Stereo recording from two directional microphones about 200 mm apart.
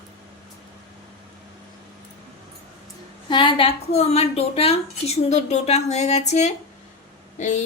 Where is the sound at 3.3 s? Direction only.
25° left (ahead or behind).